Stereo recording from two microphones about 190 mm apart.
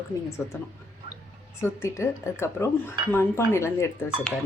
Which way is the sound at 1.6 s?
15° left (ahead or behind).